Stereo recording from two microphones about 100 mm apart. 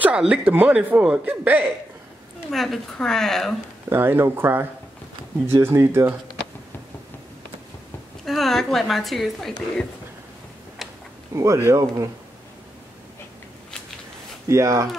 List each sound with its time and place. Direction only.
0.0 s a man's voice: 10° right (ahead or behind)
2.5 s a woman's voice: centre (ahead or behind)
3.9 s speech: 25° right (ahead or behind)
8.3 s a woman's voice: centre (ahead or behind)
11.3 s speech: 25° right (ahead or behind)
14.5 s speech: 30° right (ahead or behind)